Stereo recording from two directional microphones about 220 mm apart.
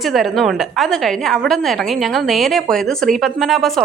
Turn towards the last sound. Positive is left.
turn(degrees=0)  # may be behind; listen again after turning